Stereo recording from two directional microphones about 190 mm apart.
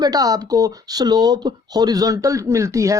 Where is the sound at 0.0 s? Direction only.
20° right (ahead or behind).